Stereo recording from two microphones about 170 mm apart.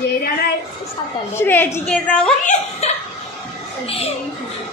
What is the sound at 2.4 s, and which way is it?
Speech, 40° left (ahead or behind).